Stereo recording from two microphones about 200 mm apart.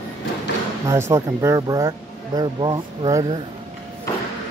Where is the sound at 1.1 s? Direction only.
15° right (ahead or behind).